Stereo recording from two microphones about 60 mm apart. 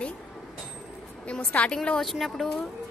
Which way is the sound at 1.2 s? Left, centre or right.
Centre.